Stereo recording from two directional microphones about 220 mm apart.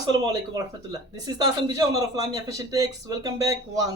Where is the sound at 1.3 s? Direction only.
15° right (ahead or behind).